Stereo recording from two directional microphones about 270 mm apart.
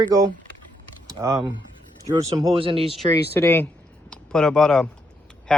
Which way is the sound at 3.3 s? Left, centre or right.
Centre.